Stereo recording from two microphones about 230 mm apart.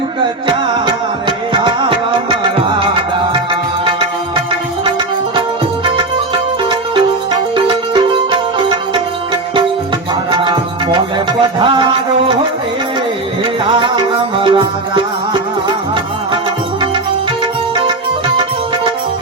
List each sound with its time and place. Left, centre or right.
1.6 s music: centre
10.3 s music: centre
13.7 s music: right